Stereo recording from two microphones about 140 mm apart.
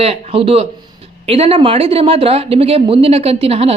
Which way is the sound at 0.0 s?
45° right (ahead or behind).